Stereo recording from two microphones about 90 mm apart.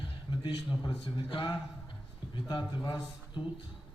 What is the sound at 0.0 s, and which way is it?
A man's voice, 60° left (ahead or behind).